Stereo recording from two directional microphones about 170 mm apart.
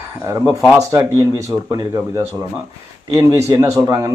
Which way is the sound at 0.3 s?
20° right (ahead or behind).